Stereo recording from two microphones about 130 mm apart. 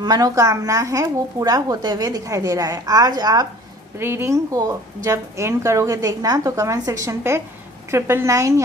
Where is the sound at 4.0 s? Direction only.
20° right (ahead or behind).